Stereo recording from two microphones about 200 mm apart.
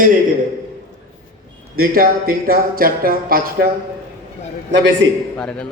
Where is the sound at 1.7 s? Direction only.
45° right (ahead or behind).